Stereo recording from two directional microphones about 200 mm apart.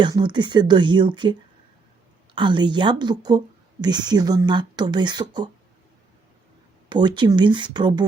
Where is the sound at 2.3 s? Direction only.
25° right (ahead or behind).